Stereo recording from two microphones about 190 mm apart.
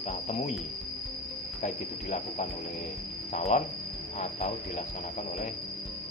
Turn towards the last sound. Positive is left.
turn(degrees=35)  # may be behind; listen again after turning